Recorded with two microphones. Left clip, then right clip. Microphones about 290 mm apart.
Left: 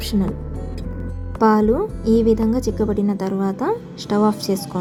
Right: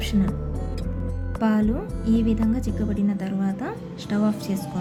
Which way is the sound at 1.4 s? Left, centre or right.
Centre.